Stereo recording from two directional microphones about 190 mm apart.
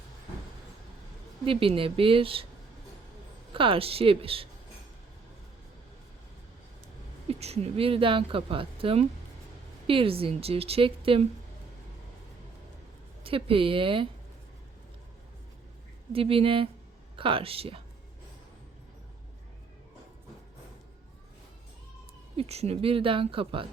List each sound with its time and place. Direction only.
1.5 s speech: 30° right (ahead or behind)
3.5 s speech: 25° right (ahead or behind)
7.3 s speech: 35° right (ahead or behind)
13.2 s speech: 30° right (ahead or behind)
16.1 s speech: 30° right (ahead or behind)
22.4 s speech: 35° right (ahead or behind)